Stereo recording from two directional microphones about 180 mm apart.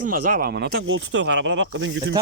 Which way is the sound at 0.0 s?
50° right (ahead or behind).